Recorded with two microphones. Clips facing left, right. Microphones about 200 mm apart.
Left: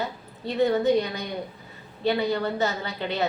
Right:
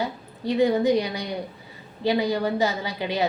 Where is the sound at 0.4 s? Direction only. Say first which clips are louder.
Right 2 dB; 15° right (ahead or behind).